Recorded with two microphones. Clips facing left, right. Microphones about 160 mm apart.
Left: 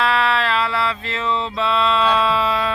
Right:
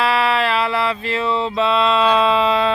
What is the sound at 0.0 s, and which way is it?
Mantra, 10° right (ahead or behind).